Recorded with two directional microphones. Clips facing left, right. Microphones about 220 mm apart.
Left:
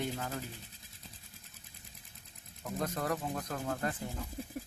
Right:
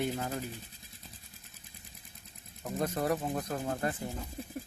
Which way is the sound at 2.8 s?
20° right (ahead or behind).